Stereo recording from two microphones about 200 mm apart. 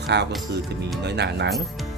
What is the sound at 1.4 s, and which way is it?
Speech, centre (ahead or behind).